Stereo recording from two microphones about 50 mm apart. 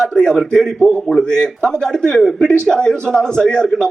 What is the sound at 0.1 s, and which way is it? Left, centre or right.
Speech, centre.